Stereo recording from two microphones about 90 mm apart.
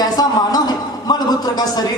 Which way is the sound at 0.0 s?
45° left (ahead or behind).